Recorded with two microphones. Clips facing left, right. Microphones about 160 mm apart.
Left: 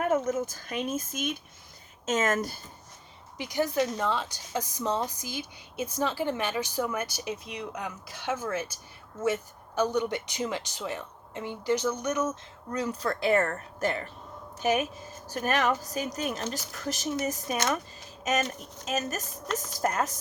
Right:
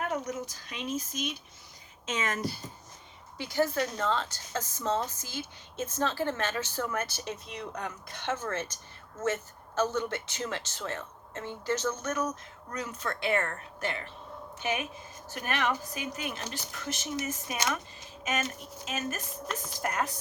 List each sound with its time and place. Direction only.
0.1 s speech: 50° left (ahead or behind)
3.3 s a woman's voice: 15° left (ahead or behind); by 17.6 s 40° left (ahead or behind)
18.9 s a woman's voice: 40° left (ahead or behind)